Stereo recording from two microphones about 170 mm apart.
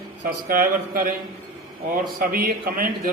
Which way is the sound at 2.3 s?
55° right (ahead or behind).